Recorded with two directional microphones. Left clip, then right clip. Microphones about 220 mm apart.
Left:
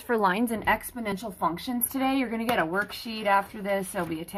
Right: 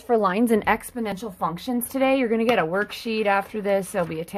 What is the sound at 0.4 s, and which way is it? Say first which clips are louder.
A woman's voice: right 5 dB; 45° right (ahead or behind).